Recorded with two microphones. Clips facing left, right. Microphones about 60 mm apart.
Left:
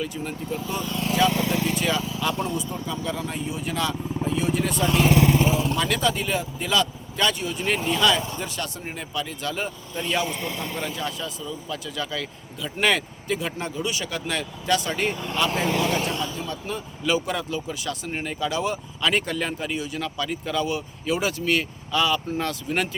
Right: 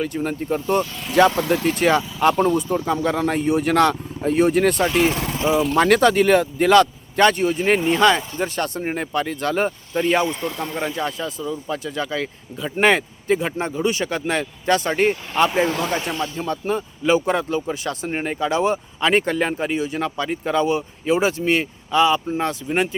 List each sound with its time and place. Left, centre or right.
0.0 s a man's voice: right